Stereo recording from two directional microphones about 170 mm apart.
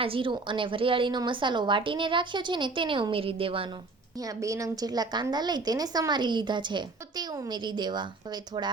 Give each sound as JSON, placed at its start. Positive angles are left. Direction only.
{"t": 0.0, "sound": "a woman's voice", "side_deg": -30}
{"t": 4.2, "sound": "a woman's voice", "side_deg": -20}